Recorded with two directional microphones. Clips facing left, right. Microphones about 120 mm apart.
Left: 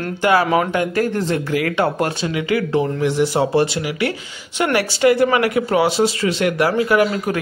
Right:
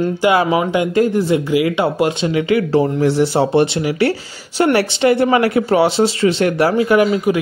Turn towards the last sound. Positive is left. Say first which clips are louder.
# right 3 dB
turn(degrees=-25)  # may be behind; listen again after turning